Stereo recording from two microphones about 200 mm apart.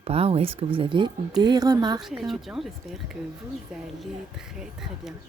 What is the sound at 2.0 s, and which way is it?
Speech, centre (ahead or behind).